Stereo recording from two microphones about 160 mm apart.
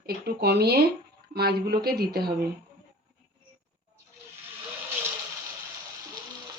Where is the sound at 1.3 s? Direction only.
80° right.